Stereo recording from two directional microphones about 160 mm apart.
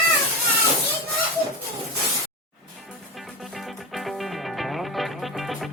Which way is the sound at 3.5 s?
Centre (ahead or behind).